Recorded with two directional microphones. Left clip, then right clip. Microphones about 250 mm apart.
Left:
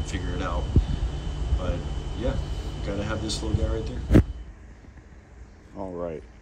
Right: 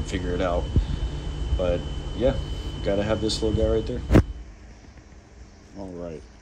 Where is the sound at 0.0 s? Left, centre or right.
Centre.